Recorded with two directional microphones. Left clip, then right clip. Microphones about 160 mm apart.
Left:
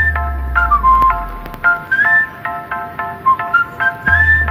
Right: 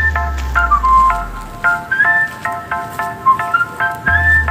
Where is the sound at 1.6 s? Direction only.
Centre (ahead or behind).